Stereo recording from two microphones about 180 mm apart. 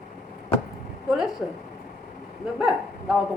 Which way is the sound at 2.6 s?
5° right (ahead or behind).